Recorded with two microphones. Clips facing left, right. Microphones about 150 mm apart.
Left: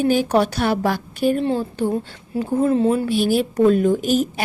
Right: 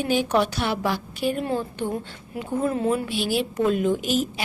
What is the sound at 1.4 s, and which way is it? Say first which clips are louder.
A woman's voice: left 5 dB; 30° left (ahead or behind).